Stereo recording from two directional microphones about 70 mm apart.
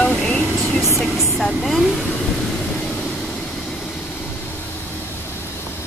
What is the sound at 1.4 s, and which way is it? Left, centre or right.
Speech, centre.